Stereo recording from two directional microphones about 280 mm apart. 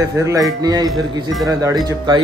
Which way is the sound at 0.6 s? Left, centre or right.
Centre.